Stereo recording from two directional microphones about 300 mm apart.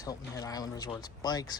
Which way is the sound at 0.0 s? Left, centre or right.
Centre.